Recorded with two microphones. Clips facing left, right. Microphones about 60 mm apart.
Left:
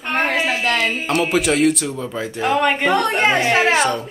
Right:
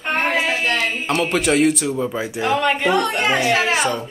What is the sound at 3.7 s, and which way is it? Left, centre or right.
Speech, centre.